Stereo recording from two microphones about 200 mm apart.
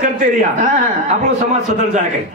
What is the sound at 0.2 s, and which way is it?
Speech, 40° right (ahead or behind).